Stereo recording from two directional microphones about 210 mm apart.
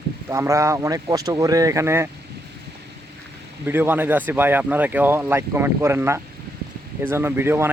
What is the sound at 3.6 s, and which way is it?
Speech, 10° right (ahead or behind).